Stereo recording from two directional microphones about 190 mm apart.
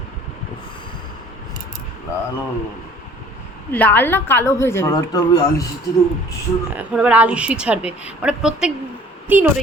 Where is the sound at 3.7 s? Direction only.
10° left (ahead or behind).